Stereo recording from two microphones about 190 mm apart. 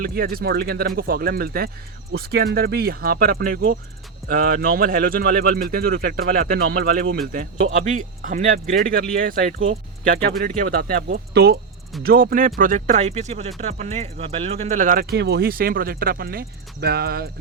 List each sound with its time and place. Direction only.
0.0 s speech: 50° right (ahead or behind)
7.9 s speech: 40° right (ahead or behind)